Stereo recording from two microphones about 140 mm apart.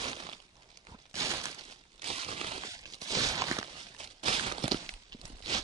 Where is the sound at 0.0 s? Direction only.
40° right (ahead or behind).